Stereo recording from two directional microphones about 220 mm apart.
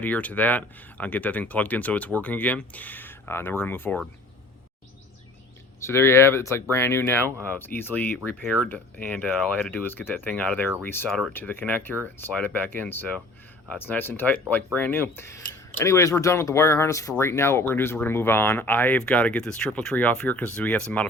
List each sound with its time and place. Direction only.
0.0 s speech: 5° left (ahead or behind)
5.8 s speech: 10° left (ahead or behind)